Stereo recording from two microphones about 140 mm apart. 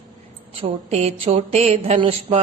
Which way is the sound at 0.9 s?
50° right (ahead or behind).